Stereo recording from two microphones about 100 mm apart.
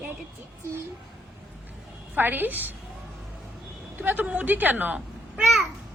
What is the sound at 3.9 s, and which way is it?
A woman's voice, 15° right (ahead or behind).